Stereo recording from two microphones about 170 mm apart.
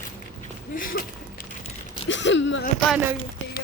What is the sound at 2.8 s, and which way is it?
Speech, 5° right (ahead or behind).